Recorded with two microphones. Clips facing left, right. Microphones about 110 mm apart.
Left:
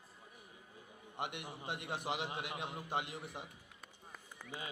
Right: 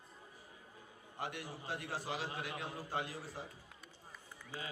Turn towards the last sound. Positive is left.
turn(degrees=20)  # may be behind; listen again after turning